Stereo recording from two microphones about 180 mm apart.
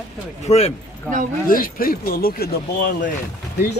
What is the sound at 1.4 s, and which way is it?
Speech, 50° left (ahead or behind).